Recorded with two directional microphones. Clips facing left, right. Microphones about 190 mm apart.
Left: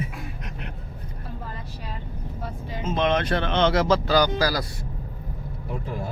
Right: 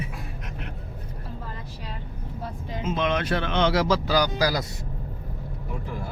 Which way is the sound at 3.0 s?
10° right (ahead or behind).